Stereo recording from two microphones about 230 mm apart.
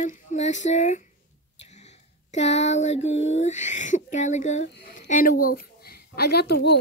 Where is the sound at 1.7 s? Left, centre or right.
Left.